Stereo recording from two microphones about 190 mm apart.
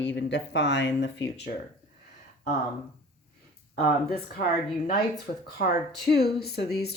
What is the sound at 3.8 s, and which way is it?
Speech, 50° left (ahead or behind).